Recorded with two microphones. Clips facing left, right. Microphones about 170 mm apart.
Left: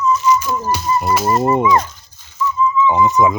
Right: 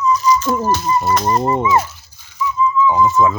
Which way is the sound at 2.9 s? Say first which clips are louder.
Left 1 dB; 20° left (ahead or behind).